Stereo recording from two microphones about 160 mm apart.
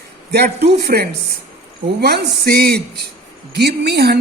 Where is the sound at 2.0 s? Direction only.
90° right.